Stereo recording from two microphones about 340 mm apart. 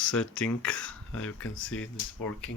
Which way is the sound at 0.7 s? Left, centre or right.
Left.